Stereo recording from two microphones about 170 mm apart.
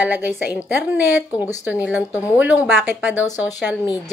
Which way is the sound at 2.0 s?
20° left (ahead or behind).